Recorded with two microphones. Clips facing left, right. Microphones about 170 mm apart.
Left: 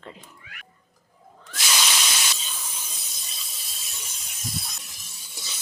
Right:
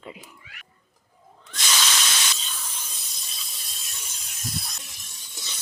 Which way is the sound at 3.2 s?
Centre (ahead or behind).